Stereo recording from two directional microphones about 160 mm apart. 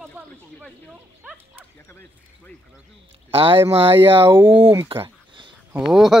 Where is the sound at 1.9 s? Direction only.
10° left (ahead or behind).